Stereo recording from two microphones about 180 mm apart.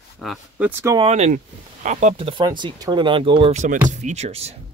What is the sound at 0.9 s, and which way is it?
Speech, 35° right (ahead or behind).